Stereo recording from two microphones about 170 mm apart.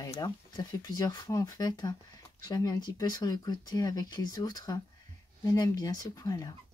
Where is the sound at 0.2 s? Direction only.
25° left (ahead or behind).